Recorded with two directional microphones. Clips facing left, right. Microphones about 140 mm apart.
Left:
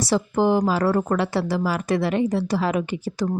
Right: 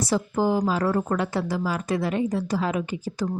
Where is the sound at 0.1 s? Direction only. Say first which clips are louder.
Left 4 dB; 75° left (ahead or behind).